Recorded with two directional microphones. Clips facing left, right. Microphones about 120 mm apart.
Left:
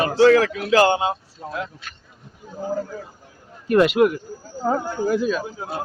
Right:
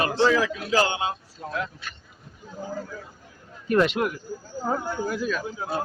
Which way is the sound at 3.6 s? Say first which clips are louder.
Left 6 dB; 5° left (ahead or behind).